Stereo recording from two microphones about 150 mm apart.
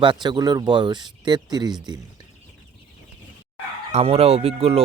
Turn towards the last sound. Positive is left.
turn(degrees=-40)  # may be behind; listen again after turning